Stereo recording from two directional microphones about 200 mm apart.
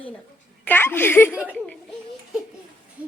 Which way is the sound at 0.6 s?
10° left (ahead or behind).